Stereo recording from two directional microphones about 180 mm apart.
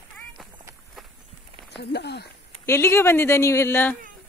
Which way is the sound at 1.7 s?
70° left (ahead or behind).